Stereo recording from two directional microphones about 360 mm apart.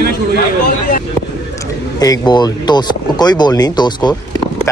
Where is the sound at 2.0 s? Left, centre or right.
Centre.